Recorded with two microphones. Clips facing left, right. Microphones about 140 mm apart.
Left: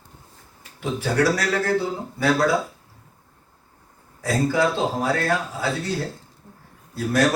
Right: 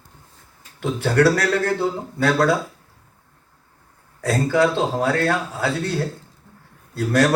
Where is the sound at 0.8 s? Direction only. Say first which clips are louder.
Right 4 dB; 60° right (ahead or behind).